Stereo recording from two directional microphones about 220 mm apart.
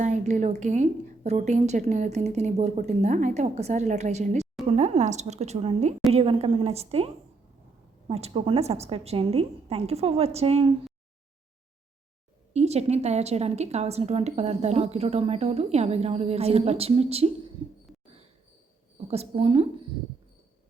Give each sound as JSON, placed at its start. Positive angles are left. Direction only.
{"t": 0.0, "sound": "a woman's voice", "side_deg": -35}
{"t": 12.5, "sound": "a woman's voice", "side_deg": -30}
{"t": 19.0, "sound": "a woman's voice", "side_deg": -30}